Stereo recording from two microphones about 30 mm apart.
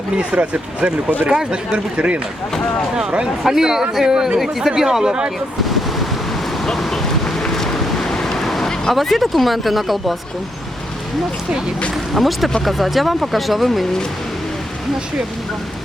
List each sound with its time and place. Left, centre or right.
0.2 s speech: right
1.3 s speech: right
2.0 s speech: right
3.4 s speech: centre
6.7 s vehicle: centre
8.9 s speech: centre
12.1 s speech: centre